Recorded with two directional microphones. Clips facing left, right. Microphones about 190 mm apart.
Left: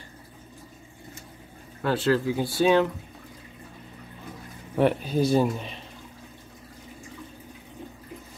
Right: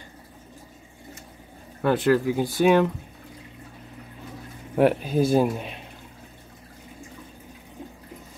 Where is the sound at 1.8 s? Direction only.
15° right (ahead or behind).